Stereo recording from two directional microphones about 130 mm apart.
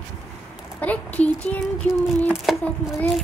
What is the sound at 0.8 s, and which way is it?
Speech, 10° left (ahead or behind).